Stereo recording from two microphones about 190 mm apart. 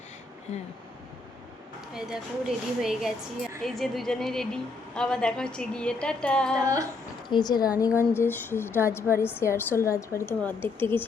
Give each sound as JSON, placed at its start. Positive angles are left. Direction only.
{"t": 1.9, "sound": "a woman's voice", "side_deg": -5}
{"t": 7.3, "sound": "a woman's voice", "side_deg": 20}